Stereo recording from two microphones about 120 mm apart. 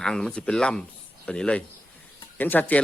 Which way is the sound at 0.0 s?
5° left (ahead or behind).